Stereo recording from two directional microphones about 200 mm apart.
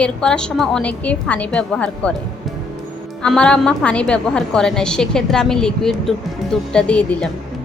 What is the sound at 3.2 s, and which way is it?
A woman's voice, 5° left (ahead or behind).